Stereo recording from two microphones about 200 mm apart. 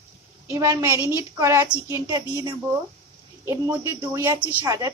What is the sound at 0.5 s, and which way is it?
A woman's voice, 15° right (ahead or behind).